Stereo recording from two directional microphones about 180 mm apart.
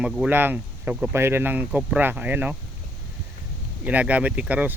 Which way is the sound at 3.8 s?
10° right (ahead or behind).